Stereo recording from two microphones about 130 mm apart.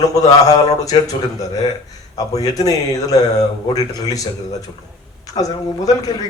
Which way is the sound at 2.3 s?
25° left (ahead or behind).